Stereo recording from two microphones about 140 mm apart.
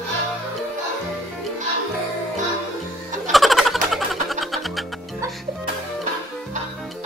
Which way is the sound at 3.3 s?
Centre (ahead or behind).